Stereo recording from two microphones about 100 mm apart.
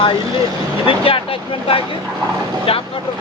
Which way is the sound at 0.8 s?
65° left (ahead or behind).